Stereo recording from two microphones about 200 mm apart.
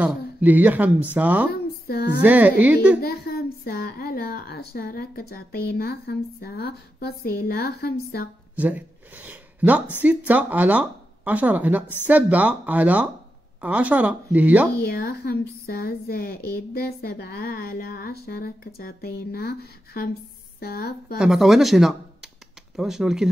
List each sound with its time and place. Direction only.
0.0 s speech: 10° right (ahead or behind)
1.5 s a sound: 50° left (ahead or behind)
2.2 s speech: 10° right (ahead or behind)
3.0 s a woman's voice: 50° left (ahead or behind)
8.5 s speech: 10° right (ahead or behind)
14.8 s a woman's voice: 50° left (ahead or behind)
21.2 s speech: centre (ahead or behind)